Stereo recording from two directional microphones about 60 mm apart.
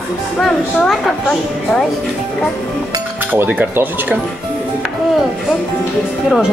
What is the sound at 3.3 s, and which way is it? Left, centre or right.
Speech, right.